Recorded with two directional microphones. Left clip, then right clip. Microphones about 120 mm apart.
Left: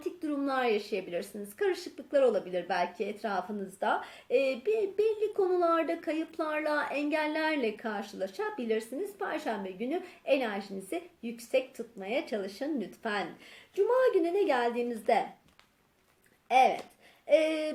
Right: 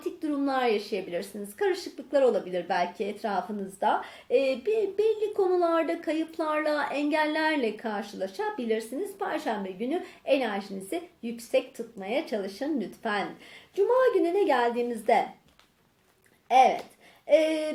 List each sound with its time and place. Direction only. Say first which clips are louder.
0.0 s a woman's voice: right 4 dB; 20° left (ahead or behind)
16.5 s a woman's voice: right 4 dB; 20° left (ahead or behind)